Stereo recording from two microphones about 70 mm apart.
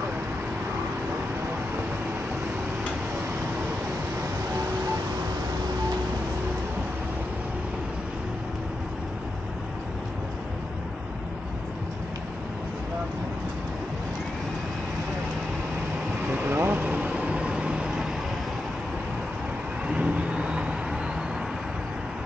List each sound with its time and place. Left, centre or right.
16.3 s vehicle: right
16.8 s vehicle: centre
19.9 s vehicle: centre